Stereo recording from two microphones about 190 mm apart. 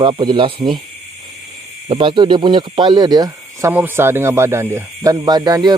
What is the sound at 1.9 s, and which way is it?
Speech, 25° right (ahead or behind).